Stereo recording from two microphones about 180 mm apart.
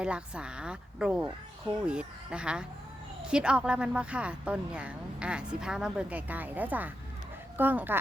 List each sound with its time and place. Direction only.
0.0 s speech: 5° right (ahead or behind)